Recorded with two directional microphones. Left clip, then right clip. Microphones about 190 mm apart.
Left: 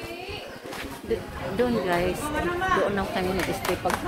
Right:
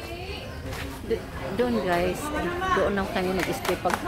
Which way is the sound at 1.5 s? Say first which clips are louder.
Even; 15° right (ahead or behind).